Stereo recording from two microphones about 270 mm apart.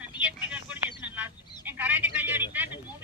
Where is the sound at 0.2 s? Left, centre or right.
Centre.